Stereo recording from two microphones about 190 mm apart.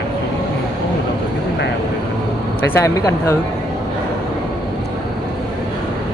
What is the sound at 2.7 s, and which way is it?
Speech, 15° left (ahead or behind).